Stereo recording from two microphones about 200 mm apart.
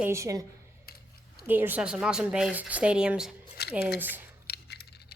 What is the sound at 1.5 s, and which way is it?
Speech, 10° right (ahead or behind).